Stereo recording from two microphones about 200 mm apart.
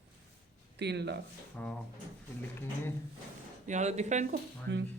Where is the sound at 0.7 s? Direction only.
55° right (ahead or behind).